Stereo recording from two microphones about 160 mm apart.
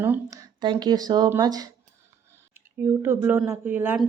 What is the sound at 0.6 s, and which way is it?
Speech, 25° right (ahead or behind).